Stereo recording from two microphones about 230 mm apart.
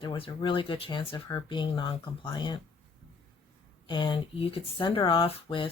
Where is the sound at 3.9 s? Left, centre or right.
Left.